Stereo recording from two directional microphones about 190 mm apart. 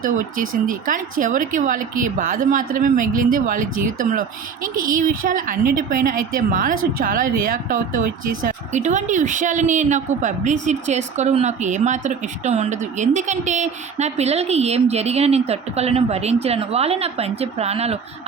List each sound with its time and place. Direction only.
0.7 s speech: 45° right (ahead or behind)